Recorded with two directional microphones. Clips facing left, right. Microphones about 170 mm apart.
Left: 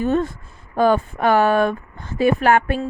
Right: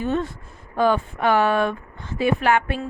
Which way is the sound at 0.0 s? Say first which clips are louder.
Left 4 dB; 45° left (ahead or behind).